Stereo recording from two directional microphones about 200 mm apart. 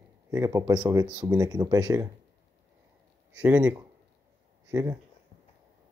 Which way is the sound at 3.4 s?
10° right (ahead or behind).